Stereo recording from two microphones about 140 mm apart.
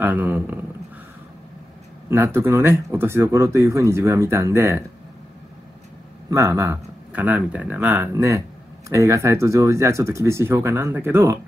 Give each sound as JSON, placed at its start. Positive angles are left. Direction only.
{"t": 0.0, "sound": "a man's voice", "side_deg": -15}
{"t": 2.0, "sound": "speech", "side_deg": -20}
{"t": 6.3, "sound": "speech", "side_deg": -20}